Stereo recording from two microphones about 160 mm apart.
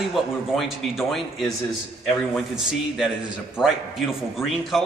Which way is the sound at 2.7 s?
5° right (ahead or behind).